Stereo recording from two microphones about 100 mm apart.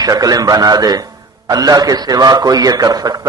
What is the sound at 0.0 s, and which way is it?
A man's voice, 40° right (ahead or behind).